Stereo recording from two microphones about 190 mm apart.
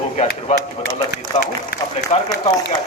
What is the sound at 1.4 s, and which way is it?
Speech, 60° left (ahead or behind).